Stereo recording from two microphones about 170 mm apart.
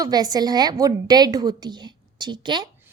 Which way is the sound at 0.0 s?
20° right (ahead or behind).